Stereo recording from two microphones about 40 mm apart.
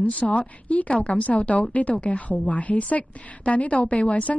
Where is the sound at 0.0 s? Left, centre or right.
Left.